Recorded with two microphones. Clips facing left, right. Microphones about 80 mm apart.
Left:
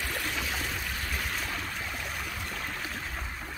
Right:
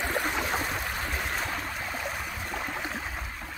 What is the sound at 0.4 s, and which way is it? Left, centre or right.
Stream, right.